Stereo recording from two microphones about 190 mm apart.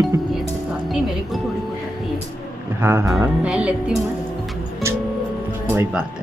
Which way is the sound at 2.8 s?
10° right (ahead or behind).